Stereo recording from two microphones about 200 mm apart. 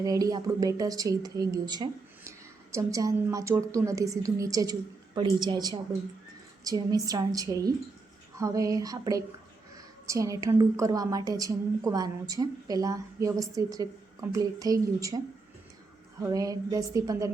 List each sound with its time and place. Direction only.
0.0 s a woman's voice: 20° right (ahead or behind)
16.2 s a woman's voice: 15° right (ahead or behind)